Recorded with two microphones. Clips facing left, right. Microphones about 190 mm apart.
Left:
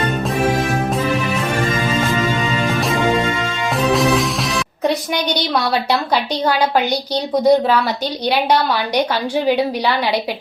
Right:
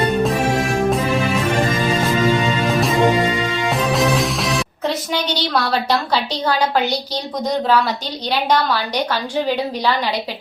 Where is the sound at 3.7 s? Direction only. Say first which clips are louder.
Left 3 dB; centre (ahead or behind).